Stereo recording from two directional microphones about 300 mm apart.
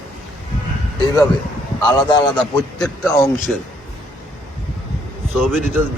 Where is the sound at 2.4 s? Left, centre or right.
Centre.